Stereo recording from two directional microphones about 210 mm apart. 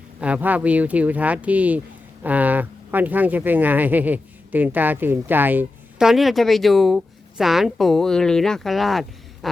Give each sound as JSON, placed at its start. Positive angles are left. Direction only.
{"t": 0.2, "sound": "speech", "side_deg": -5}